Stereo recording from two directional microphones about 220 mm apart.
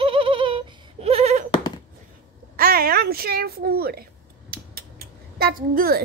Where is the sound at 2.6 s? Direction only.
40° right (ahead or behind).